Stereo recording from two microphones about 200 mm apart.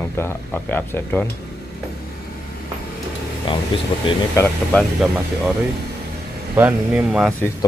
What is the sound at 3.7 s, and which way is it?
Speech, 25° left (ahead or behind).